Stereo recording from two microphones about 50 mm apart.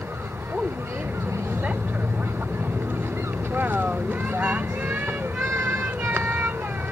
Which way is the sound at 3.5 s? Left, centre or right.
Right.